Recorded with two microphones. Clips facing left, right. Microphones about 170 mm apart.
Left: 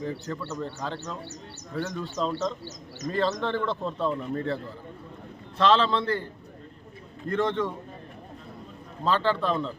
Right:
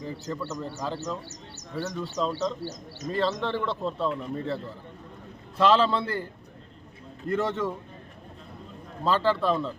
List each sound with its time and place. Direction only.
0.0 s a man's voice: 5° right (ahead or behind)
7.3 s speech: 5° right (ahead or behind)
9.0 s speech: 5° right (ahead or behind)